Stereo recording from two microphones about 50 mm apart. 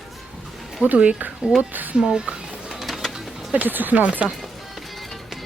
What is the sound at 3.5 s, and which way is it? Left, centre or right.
Speech, right.